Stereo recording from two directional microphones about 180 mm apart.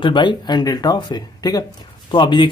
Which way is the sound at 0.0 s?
25° left (ahead or behind).